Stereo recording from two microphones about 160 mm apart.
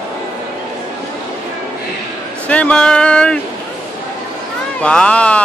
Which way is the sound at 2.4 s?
10° left (ahead or behind).